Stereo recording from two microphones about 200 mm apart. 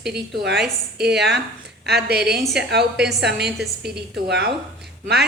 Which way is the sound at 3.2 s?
55° right (ahead or behind).